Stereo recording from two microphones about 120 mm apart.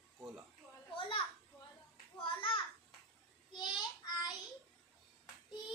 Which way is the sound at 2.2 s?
45° left (ahead or behind).